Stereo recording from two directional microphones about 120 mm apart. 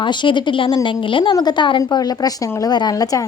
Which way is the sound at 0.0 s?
40° left (ahead or behind).